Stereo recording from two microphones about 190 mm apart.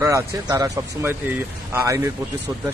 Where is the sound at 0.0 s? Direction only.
15° right (ahead or behind).